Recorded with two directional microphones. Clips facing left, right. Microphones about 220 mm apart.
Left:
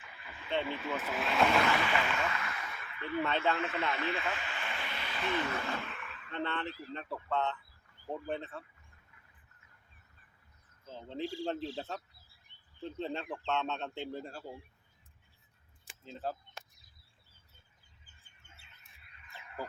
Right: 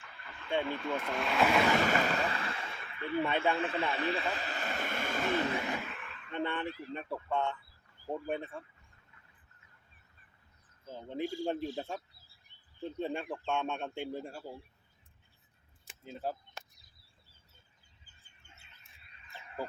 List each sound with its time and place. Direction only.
0.0 s a sound: 5° left (ahead or behind)
0.6 s speech: 5° left (ahead or behind)
1.8 s speech: 40° right (ahead or behind)
3.2 s speech: 15° right (ahead or behind)
3.6 s speech: 30° right (ahead or behind); by 5.4 s 45° right (ahead or behind)
5.5 s a sound: 15° right (ahead or behind)
5.8 s a sound: centre (ahead or behind)
6.3 s speech: 15° right (ahead or behind)
10.8 s speech: 15° right (ahead or behind)
13.0 s speech: 10° right (ahead or behind)
15.9 s speech: 10° right (ahead or behind)